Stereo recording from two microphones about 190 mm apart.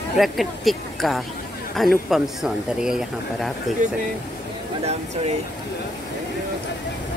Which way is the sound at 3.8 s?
45° right (ahead or behind).